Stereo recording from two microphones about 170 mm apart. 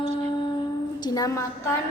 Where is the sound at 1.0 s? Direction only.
20° left (ahead or behind).